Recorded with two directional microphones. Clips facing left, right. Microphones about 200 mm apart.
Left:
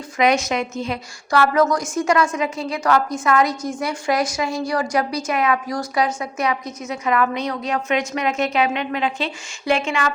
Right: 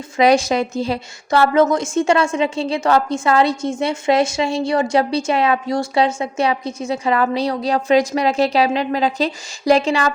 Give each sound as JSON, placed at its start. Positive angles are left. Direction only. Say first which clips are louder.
{"t": 0.2, "sound": "a woman's voice", "louder": "right 4 dB", "side_deg": -30}